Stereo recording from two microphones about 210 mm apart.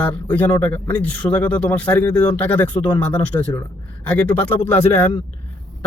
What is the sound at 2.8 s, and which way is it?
Speech, 25° left (ahead or behind).